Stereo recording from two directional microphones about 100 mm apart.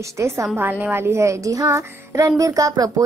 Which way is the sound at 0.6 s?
20° right (ahead or behind).